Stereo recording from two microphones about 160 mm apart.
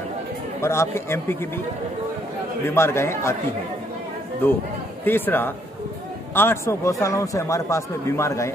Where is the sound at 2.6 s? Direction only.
15° left (ahead or behind).